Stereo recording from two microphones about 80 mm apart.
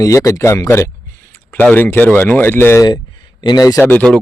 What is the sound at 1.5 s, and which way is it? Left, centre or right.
Speech, left.